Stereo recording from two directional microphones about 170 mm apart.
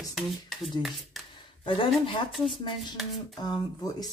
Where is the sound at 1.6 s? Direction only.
30° left (ahead or behind).